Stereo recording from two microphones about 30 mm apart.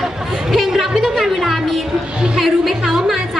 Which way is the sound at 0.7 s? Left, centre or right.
Centre.